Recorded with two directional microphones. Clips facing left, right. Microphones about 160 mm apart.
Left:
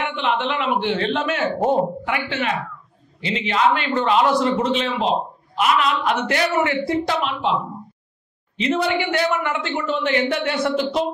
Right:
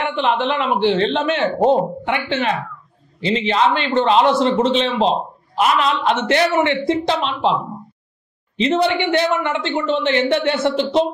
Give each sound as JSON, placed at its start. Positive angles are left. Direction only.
{"t": 0.0, "sound": "a woman's voice", "side_deg": -35}
{"t": 8.5, "sound": "a woman's voice", "side_deg": -30}